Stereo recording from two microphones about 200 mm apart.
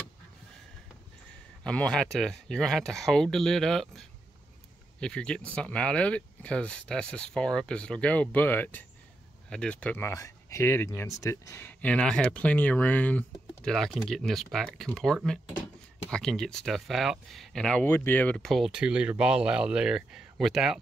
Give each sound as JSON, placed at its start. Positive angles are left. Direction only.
{"t": 1.6, "sound": "speech", "side_deg": 5}